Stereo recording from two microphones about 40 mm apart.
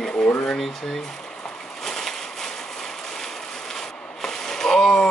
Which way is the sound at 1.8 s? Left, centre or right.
Centre.